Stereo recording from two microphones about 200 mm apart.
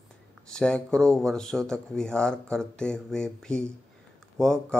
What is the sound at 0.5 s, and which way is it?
Speech, 5° left (ahead or behind).